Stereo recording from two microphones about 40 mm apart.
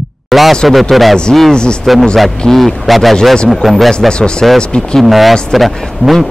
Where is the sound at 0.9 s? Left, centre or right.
Centre.